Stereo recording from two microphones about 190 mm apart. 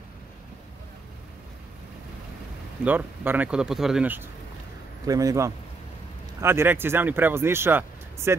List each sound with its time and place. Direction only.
2.8 s speech: 10° right (ahead or behind)